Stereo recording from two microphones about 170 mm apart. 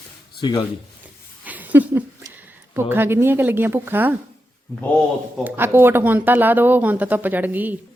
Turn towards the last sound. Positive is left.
turn(degrees=-10)  # may be behind; listen again after turning